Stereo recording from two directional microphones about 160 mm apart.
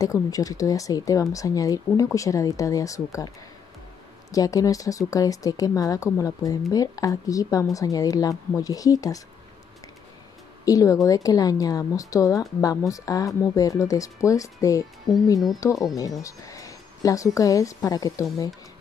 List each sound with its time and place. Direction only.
0.0 s speech: 20° left (ahead or behind)
4.3 s speech: 20° left (ahead or behind)
10.6 s speech: 20° left (ahead or behind)